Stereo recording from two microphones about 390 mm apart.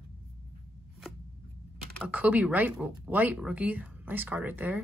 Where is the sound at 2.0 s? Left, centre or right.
Centre.